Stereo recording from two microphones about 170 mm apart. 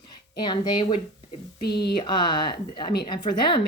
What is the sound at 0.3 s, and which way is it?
Speech, 25° left (ahead or behind).